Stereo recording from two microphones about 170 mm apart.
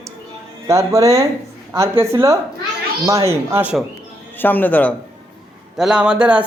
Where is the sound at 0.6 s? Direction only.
15° right (ahead or behind).